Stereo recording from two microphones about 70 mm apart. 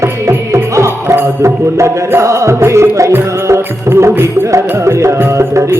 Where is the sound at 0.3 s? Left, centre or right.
Right.